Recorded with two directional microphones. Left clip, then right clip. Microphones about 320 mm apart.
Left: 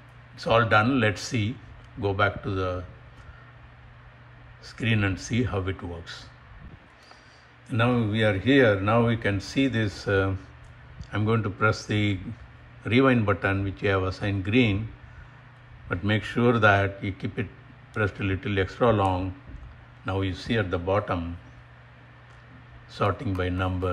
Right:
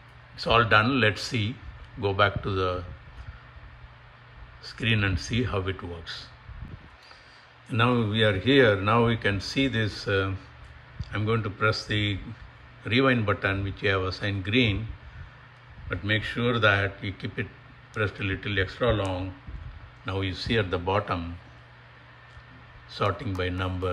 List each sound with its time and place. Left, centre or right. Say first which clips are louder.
0.4 s speech: even; centre
4.6 s speech: right 1 dB; centre
7.7 s speech: right 1 dB; centre
15.9 s a man's voice: even; centre
22.9 s speech: left 1 dB; centre